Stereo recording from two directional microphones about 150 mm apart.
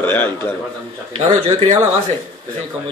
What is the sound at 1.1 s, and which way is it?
Speech, 40° right (ahead or behind).